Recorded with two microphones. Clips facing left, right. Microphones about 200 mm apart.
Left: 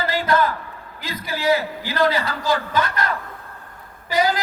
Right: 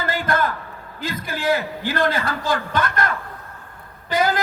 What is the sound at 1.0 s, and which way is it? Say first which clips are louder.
A man's voice: left 1 dB; 50° right (ahead or behind).